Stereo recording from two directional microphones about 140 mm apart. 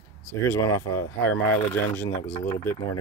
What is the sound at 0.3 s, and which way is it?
Speech, 20° left (ahead or behind).